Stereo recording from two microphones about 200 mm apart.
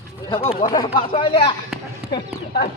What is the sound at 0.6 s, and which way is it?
Speech, 20° left (ahead or behind).